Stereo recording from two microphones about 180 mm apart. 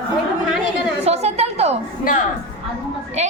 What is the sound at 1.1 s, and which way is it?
Speech, 35° right (ahead or behind).